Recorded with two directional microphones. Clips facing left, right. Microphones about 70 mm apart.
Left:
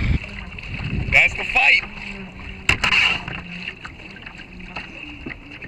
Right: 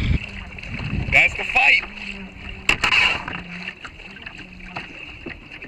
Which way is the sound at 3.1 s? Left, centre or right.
Right.